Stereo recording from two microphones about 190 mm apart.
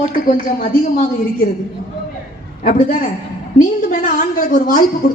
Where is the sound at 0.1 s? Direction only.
45° left (ahead or behind).